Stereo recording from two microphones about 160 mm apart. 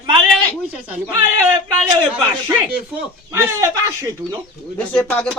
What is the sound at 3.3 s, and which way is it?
Speech, 20° right (ahead or behind).